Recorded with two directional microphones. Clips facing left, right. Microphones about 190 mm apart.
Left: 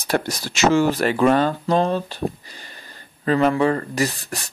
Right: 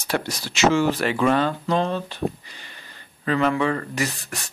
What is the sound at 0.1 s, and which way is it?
Speech, 40° left (ahead or behind).